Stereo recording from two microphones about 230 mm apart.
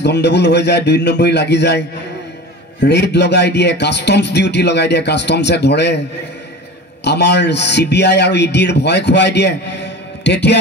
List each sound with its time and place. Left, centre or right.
0.0 s a man's voice: left
7.1 s a man's voice: left